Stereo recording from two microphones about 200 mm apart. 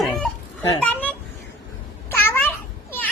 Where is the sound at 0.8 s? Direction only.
10° left (ahead or behind).